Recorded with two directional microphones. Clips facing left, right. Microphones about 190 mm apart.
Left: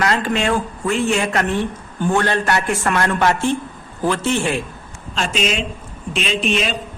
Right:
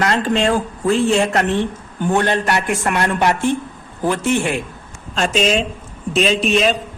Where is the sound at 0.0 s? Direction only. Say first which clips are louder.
Right 2 dB; 30° right (ahead or behind).